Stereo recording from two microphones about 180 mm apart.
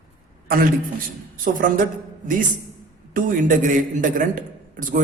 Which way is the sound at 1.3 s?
50° right (ahead or behind).